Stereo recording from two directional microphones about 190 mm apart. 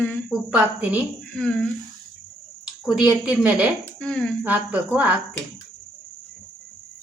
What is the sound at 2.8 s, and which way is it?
Speech, 5° right (ahead or behind).